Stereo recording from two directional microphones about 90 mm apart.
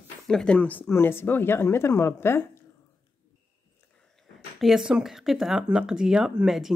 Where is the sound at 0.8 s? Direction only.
30° left (ahead or behind).